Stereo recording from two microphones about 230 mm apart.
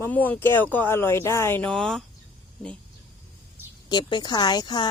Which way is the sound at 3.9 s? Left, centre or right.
Centre.